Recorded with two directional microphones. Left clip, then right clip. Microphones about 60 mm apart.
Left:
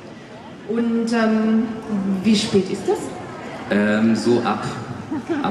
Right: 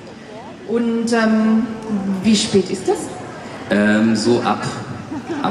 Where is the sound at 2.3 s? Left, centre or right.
Centre.